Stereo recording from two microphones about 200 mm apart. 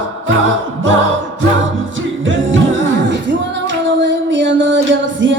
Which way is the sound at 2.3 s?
70° right (ahead or behind).